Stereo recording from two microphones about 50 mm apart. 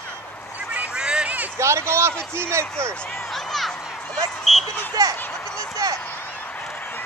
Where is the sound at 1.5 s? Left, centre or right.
Right.